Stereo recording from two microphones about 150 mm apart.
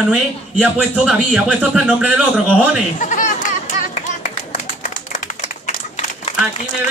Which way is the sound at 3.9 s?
55° left (ahead or behind).